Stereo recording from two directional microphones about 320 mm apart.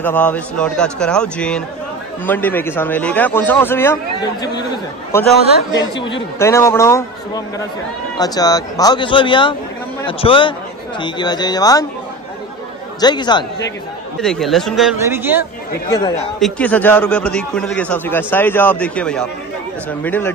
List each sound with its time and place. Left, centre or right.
0.0 s a man's voice: centre
13.0 s a man's voice: centre
14.2 s a man's voice: centre
15.9 s a man's voice: centre
16.3 s a man's voice: centre